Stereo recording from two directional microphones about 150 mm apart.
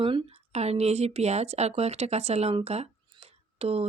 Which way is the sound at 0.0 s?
35° right (ahead or behind).